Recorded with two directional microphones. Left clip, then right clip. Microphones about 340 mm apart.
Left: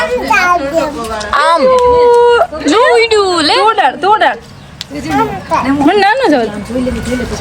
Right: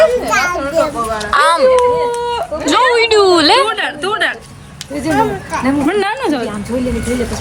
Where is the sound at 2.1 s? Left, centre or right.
Left.